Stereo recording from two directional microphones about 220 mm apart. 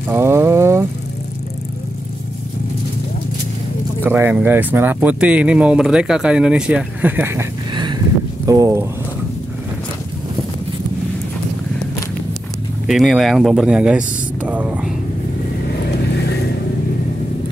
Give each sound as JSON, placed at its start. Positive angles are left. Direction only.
{"t": 0.1, "sound": "vehicle", "side_deg": -10}
{"t": 4.0, "sound": "speech", "side_deg": -10}
{"t": 12.8, "sound": "speech", "side_deg": 0}
{"t": 16.1, "sound": "vehicle", "side_deg": 50}